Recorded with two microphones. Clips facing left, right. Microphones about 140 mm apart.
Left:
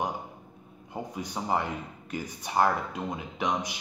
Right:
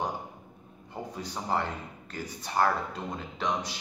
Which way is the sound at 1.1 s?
15° left (ahead or behind).